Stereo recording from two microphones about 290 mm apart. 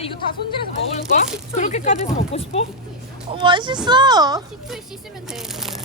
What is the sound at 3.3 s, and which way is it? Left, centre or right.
Speech, centre.